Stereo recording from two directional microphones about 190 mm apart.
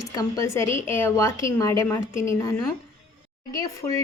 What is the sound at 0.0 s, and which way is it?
Speech, 20° left (ahead or behind).